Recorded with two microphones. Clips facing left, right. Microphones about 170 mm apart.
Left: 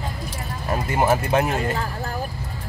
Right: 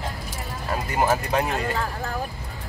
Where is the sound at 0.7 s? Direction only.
20° left (ahead or behind).